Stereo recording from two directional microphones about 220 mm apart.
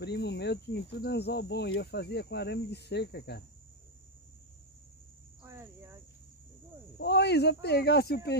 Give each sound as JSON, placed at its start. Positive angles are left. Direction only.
{"t": 0.0, "sound": "speech", "side_deg": 50}
{"t": 5.4, "sound": "cricket", "side_deg": -10}
{"t": 7.0, "sound": "speech", "side_deg": 50}